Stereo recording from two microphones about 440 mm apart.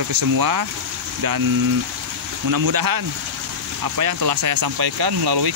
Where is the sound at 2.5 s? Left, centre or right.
Right.